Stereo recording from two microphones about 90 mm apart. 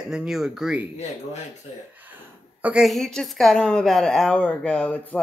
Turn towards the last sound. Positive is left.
turn(degrees=15)  # may be behind; listen again after turning